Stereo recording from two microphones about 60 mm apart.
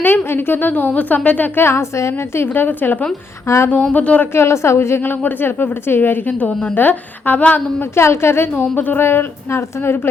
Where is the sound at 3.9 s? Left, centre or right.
Left.